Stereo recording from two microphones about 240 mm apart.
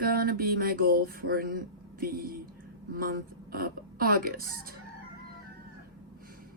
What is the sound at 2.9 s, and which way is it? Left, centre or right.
Speech, right.